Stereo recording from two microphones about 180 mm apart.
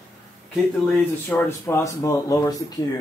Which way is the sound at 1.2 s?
15° left (ahead or behind).